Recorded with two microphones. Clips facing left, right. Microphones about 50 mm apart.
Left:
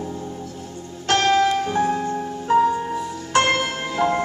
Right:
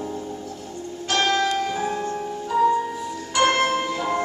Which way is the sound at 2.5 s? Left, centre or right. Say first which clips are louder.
Left 2 dB; left.